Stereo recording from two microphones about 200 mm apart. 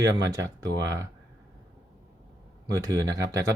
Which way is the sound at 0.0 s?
15° right (ahead or behind).